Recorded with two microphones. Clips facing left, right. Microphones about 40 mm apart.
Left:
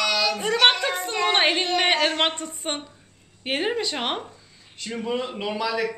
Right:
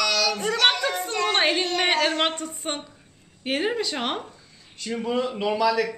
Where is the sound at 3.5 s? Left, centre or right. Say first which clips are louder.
Even; centre.